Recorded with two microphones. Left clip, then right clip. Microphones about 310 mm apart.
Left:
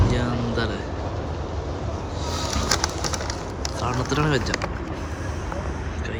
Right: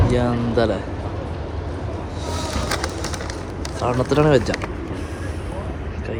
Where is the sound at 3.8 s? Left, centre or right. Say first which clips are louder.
Right 7 dB; centre.